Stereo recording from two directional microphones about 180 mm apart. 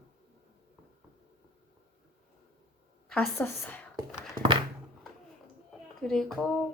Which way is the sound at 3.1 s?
10° left (ahead or behind).